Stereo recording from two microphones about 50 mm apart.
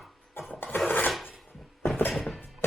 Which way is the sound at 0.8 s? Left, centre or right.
Left.